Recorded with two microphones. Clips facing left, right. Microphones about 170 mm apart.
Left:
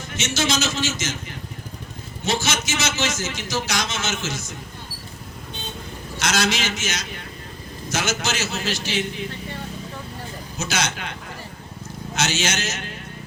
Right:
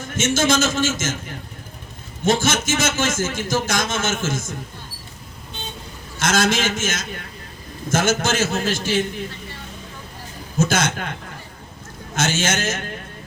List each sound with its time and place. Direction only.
0.2 s a man's voice: 50° right (ahead or behind)
2.2 s a man's voice: 50° right (ahead or behind)
6.1 s a man's voice: 50° right (ahead or behind)
10.6 s a man's voice: 50° right (ahead or behind)
12.1 s a man's voice: 50° right (ahead or behind)